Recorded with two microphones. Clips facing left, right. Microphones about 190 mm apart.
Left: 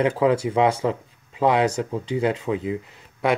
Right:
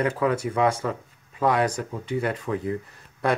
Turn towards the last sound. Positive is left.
turn(degrees=20)  # may be behind; listen again after turning